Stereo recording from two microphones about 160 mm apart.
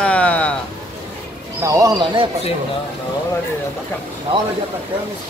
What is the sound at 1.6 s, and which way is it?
Speech, 20° right (ahead or behind).